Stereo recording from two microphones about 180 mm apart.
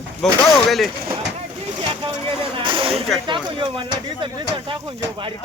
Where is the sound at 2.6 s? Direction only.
30° right (ahead or behind).